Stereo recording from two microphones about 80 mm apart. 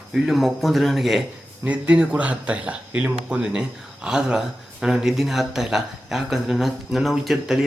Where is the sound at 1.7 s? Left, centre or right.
Centre.